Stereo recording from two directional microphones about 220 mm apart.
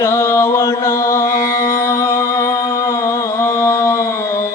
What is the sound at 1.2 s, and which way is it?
Music, 35° left (ahead or behind).